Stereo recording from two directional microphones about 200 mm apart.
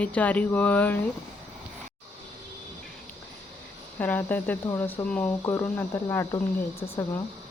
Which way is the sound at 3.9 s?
10° left (ahead or behind).